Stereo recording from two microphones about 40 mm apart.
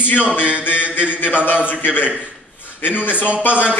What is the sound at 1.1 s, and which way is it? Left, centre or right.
Speech, left.